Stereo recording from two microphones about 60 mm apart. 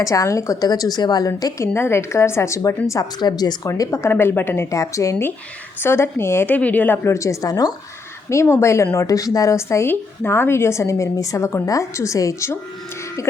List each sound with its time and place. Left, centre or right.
0.0 s a woman's voice: left
1.6 s a woman's voice: left
2.6 s a woman's voice: left
3.9 s a woman's voice: left
4.7 s a woman's voice: left
5.8 s a woman's voice: left
6.5 s speech: left
7.1 s a woman's voice: left
8.3 s a woman's voice: left
9.0 s a woman's voice: left
9.6 s a woman's voice: left